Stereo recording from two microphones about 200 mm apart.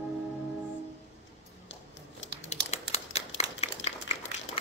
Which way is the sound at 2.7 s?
35° left (ahead or behind).